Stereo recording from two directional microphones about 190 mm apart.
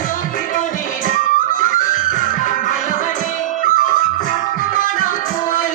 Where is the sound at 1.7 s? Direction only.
45° left (ahead or behind).